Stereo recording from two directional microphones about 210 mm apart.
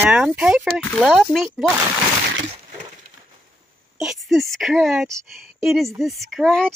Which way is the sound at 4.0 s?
Centre (ahead or behind).